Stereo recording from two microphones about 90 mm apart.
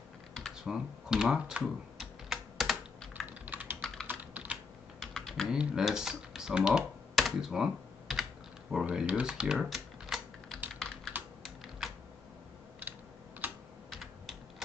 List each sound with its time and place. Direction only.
0.6 s speech: 5° right (ahead or behind)
1.6 s typing: centre (ahead or behind)
3.3 s typing: 20° right (ahead or behind)
3.8 s typing: 5° left (ahead or behind)
4.1 s computer keyboard: 20° right (ahead or behind)
5.0 s typing: 5° left (ahead or behind)
5.5 s computer keyboard: 10° right (ahead or behind)
8.8 s typing: 15° right (ahead or behind)
10.8 s computer keyboard: 5° left (ahead or behind)
11.4 s typing: centre (ahead or behind)
13.4 s typing: 20° right (ahead or behind)